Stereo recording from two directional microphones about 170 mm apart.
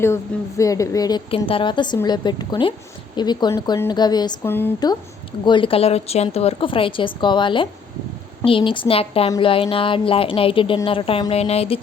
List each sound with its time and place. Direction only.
0.0 s a woman's voice: 15° left (ahead or behind)
4.4 s speech: 10° left (ahead or behind)
5.5 s a woman's voice: 30° left (ahead or behind)